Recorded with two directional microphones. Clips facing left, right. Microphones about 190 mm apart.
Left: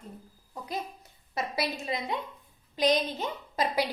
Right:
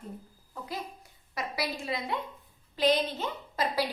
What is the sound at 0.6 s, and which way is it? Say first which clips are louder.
A woman's voice: left 3 dB; 20° left (ahead or behind).